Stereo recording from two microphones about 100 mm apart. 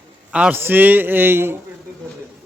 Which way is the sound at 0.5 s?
20° right (ahead or behind).